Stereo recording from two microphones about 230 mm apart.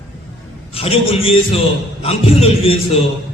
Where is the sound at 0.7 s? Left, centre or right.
Left.